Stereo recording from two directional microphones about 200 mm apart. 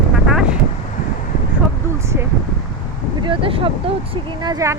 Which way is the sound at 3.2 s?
25° right (ahead or behind).